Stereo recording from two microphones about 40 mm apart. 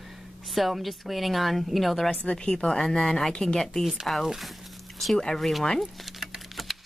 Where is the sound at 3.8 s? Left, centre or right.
Centre.